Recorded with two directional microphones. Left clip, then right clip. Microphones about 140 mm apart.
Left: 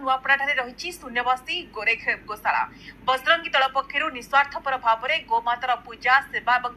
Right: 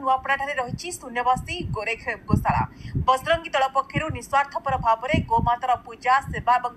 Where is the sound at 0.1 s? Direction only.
30° right (ahead or behind).